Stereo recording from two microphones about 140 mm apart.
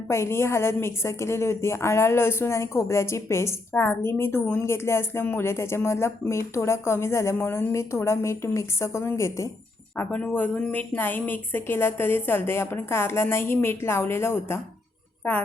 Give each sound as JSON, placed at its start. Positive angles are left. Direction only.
{"t": 0.1, "sound": "a woman's voice", "side_deg": 20}